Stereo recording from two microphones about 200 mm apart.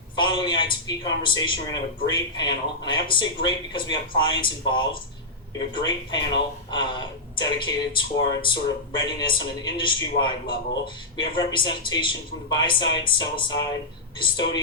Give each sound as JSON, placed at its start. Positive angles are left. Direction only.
{"t": 0.2, "sound": "speech", "side_deg": 25}